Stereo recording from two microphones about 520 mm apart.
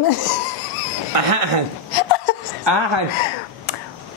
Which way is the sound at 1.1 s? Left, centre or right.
Right.